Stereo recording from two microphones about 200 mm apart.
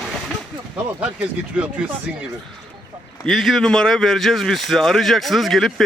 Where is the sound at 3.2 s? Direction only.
Centre (ahead or behind).